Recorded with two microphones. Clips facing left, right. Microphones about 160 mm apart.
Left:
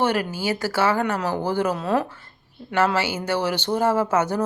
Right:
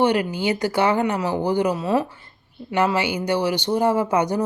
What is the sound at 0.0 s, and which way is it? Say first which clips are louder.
Speech: right 3 dB; 15° right (ahead or behind).